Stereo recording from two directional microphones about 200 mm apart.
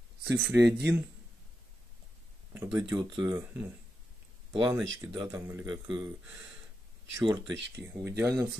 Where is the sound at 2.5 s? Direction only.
5° right (ahead or behind).